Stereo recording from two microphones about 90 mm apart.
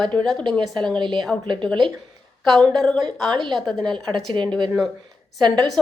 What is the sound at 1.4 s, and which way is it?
Speech, 60° right (ahead or behind).